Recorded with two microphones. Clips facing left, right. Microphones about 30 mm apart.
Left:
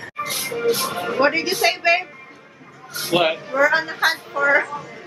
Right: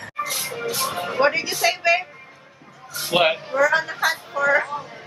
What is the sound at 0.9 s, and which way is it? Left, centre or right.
Speech, centre.